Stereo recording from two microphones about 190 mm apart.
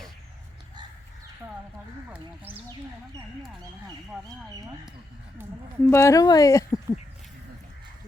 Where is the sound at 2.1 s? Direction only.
10° right (ahead or behind).